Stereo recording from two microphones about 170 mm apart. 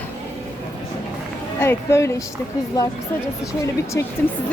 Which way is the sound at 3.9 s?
15° left (ahead or behind).